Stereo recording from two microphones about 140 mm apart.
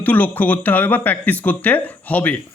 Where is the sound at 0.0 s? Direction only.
10° left (ahead or behind).